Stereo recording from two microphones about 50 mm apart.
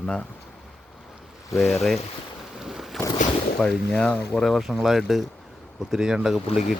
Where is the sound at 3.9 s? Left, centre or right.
Centre.